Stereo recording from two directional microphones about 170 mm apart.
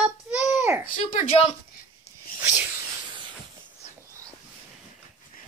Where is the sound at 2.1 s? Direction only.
40° left (ahead or behind).